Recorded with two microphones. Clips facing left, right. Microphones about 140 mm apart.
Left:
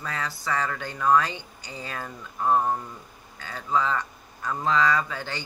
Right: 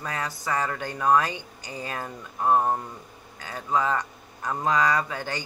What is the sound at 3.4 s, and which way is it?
Speech, 15° right (ahead or behind).